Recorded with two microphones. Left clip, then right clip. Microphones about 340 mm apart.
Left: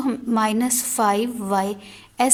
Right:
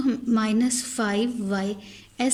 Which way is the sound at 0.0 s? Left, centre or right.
Centre.